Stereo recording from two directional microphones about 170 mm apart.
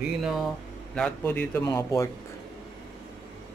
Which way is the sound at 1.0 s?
10° left (ahead or behind).